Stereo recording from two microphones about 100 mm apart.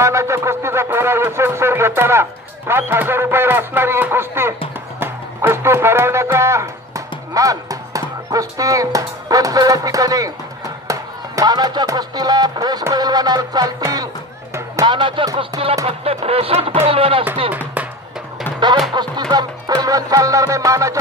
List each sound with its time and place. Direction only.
0.0 s speech: 30° right (ahead or behind)
12.9 s music: 40° right (ahead or behind)
14.9 s speech: 55° right (ahead or behind)
15.8 s speech: 85° right; by 17.2 s 70° right (ahead or behind)
18.9 s music: 50° right (ahead or behind); by 21.0 s 35° right (ahead or behind)